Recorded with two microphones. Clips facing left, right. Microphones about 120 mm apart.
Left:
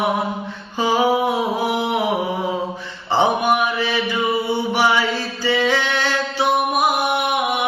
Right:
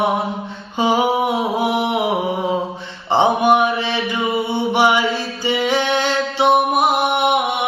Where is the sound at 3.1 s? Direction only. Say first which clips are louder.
Right 3 dB; 25° right (ahead or behind).